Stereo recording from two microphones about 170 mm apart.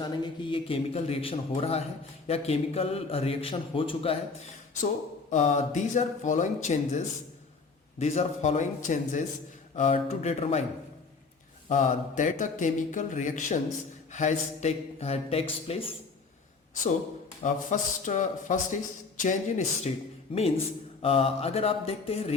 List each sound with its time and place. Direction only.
0.0 s a man's voice: 30° left (ahead or behind)
5.3 s a man's voice: 45° left (ahead or behind)
11.7 s a man's voice: 45° left (ahead or behind)
17.4 s speech: 45° left (ahead or behind)
20.3 s a man's voice: 35° left (ahead or behind)